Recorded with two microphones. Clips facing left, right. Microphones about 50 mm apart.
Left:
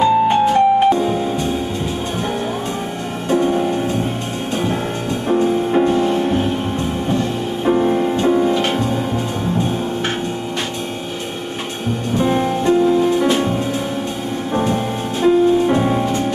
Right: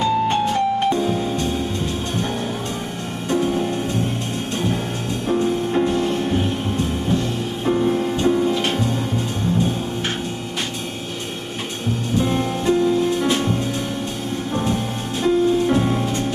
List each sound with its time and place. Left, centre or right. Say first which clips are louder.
0.0 s music: left 5 dB; centre
3.3 s music: left 4 dB; centre
5.3 s music: left 4 dB; centre
7.6 s music: left 4 dB; centre
8.5 s music: left 3 dB; centre
12.2 s music: left 5 dB; centre